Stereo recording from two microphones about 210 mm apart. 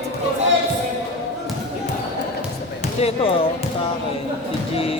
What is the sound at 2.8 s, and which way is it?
Speech, 30° left (ahead or behind).